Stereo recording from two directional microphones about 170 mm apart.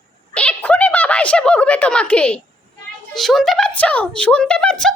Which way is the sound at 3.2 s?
Centre (ahead or behind).